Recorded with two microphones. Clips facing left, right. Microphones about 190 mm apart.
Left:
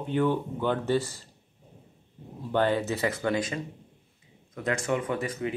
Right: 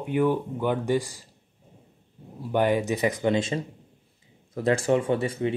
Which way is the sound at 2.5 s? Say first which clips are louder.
Right 2 dB; 15° right (ahead or behind).